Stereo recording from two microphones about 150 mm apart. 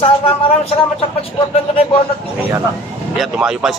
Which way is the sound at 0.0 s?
40° left (ahead or behind).